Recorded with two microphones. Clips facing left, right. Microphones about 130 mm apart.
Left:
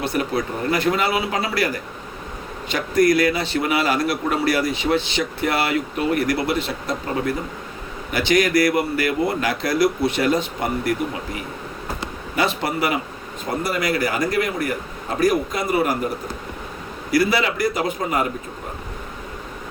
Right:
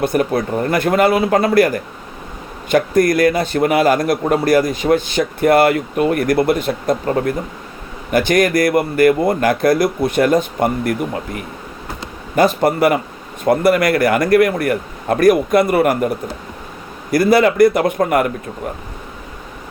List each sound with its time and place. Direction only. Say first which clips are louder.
0.0 s a man's voice: right 6 dB; 50° right (ahead or behind)
12.4 s a man's voice: right 8 dB; 45° right (ahead or behind)
13.4 s a man's voice: right 10 dB; 60° right (ahead or behind)